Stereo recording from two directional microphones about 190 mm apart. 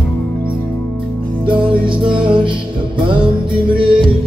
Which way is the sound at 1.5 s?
25° right (ahead or behind).